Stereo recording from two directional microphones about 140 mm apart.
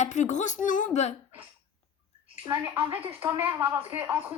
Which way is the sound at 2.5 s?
15° right (ahead or behind).